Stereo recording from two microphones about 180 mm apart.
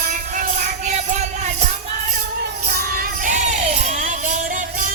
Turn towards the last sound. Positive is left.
turn(degrees=-45)  # may be behind; listen again after turning